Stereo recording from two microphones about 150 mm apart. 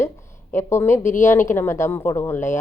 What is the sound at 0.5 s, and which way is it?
Speech, 15° left (ahead or behind).